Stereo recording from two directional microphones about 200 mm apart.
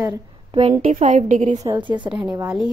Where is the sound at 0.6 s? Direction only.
35° right (ahead or behind).